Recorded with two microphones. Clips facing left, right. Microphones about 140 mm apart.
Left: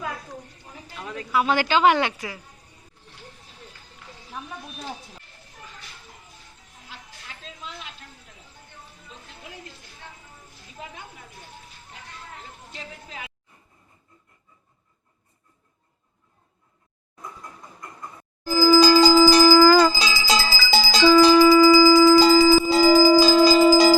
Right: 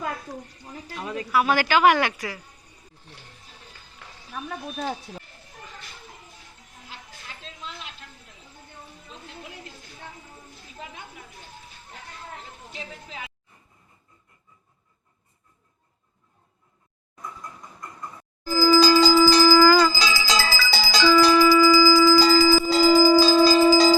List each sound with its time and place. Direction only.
1.3 s a woman's voice: 20° left (ahead or behind)
18.5 s music: 15° left (ahead or behind)
20.7 s bell: 25° left (ahead or behind)